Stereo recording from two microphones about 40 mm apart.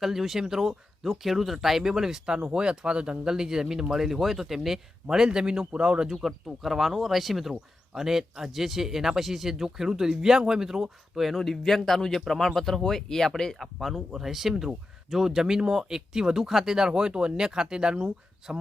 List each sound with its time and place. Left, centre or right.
0.0 s speech: centre
2.3 s speech: right
6.1 s speech: centre
13.6 s speech: centre; by 18.6 s right